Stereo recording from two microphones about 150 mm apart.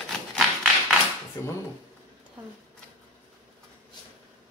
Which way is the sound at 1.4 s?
20° left (ahead or behind).